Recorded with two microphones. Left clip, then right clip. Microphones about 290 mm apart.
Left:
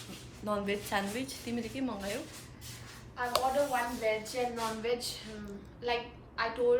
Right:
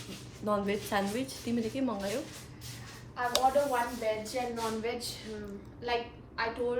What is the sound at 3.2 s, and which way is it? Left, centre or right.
Speech, right.